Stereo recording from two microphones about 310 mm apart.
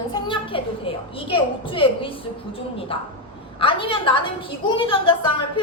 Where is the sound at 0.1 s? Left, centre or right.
Centre.